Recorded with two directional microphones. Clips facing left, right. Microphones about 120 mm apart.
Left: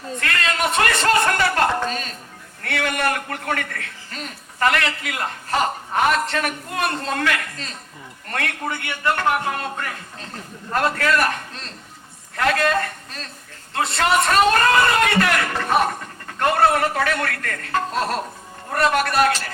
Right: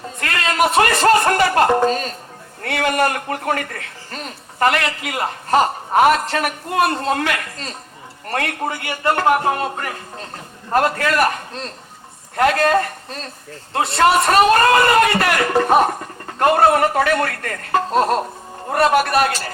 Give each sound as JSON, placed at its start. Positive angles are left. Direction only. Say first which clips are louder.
{"t": 0.2, "sound": "a man's voice", "louder": "right 5 dB", "side_deg": -30}
{"t": 15.2, "sound": "a man's voice", "louder": "right 4 dB", "side_deg": -30}